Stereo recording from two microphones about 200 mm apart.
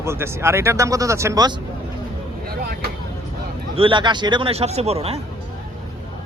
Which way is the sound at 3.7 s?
25° right (ahead or behind).